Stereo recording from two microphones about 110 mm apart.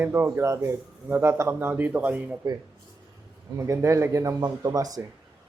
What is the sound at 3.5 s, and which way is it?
Speech, 25° right (ahead or behind).